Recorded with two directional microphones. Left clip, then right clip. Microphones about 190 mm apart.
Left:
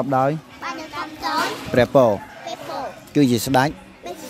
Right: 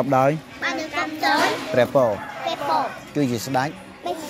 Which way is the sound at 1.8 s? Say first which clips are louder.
Left 3 dB; 70° left (ahead or behind).